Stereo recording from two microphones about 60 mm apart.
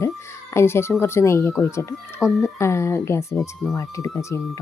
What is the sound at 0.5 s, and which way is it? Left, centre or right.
Speech, left.